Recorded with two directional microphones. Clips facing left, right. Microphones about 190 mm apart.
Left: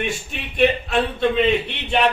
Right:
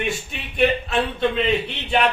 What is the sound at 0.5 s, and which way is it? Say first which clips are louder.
Speech: left 2 dB; centre (ahead or behind).